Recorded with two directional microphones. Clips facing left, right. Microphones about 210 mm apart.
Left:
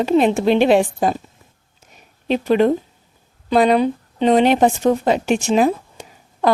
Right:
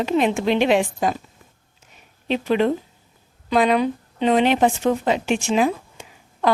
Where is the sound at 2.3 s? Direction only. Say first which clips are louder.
Left 4 dB; 45° left (ahead or behind).